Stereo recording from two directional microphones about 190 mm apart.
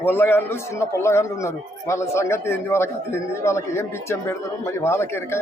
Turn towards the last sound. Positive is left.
turn(degrees=15)  # may be behind; listen again after turning